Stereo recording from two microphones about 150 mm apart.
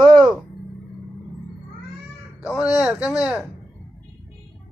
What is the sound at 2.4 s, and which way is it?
Speech, 5° right (ahead or behind).